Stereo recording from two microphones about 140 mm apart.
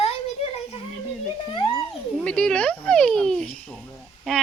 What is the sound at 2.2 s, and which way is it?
A child's voice, 5° left (ahead or behind).